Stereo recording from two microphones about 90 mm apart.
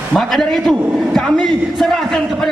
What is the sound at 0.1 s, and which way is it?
A man's voice, 5° left (ahead or behind).